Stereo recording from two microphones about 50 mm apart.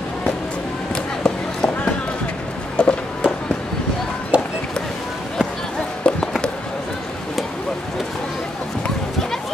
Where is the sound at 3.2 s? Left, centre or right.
Right.